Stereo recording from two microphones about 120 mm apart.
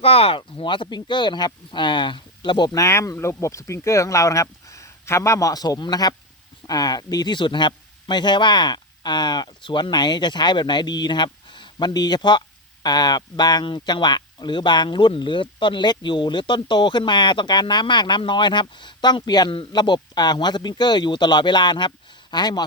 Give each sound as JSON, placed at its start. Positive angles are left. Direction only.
{"t": 0.0, "sound": "speech", "side_deg": 55}
{"t": 2.7, "sound": "speech", "side_deg": 25}